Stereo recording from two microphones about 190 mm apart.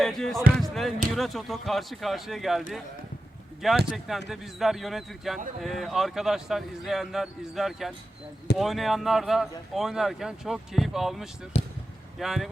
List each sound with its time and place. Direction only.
0.0 s speech: centre (ahead or behind)
3.9 s speech: centre (ahead or behind)
11.5 s basketball bounce: 35° left (ahead or behind)
12.2 s speech: centre (ahead or behind)